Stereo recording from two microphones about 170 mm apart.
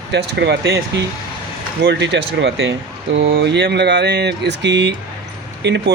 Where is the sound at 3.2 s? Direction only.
65° right (ahead or behind).